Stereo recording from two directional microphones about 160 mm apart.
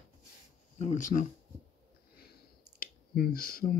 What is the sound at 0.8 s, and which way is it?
Speech, 50° left (ahead or behind).